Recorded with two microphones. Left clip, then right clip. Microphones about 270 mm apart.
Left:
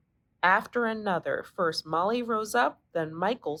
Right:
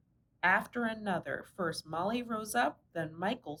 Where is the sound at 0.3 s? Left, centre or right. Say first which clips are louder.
Left 6 dB; centre.